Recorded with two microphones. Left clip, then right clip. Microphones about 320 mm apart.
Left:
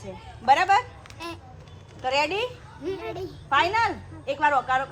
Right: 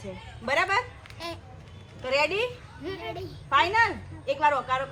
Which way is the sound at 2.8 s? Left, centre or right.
Centre.